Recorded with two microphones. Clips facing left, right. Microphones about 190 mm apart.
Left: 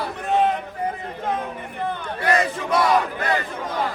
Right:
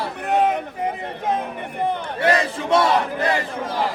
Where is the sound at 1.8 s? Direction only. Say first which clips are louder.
Right 5 dB; 20° right (ahead or behind).